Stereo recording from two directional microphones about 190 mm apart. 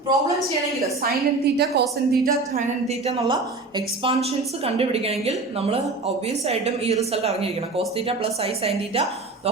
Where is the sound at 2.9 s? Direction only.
35° right (ahead or behind).